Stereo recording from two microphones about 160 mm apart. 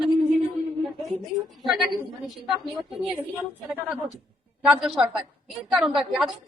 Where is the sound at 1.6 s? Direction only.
Centre (ahead or behind).